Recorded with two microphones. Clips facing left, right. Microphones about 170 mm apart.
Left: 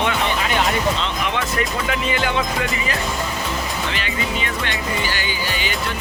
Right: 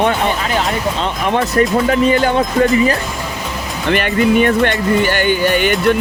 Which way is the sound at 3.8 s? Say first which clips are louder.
Right 11 dB; 55° right (ahead or behind).